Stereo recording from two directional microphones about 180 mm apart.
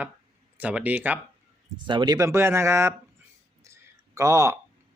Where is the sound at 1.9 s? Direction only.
25° right (ahead or behind).